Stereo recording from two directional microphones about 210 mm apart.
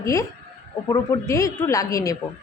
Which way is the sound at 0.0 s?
15° left (ahead or behind).